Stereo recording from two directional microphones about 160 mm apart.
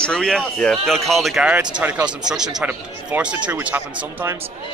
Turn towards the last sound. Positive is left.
turn(degrees=-10)  # may be behind; listen again after turning